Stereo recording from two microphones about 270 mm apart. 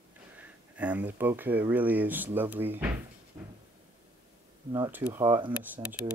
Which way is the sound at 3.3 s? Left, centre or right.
Centre.